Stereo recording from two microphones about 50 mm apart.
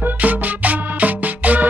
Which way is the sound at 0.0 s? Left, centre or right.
Right.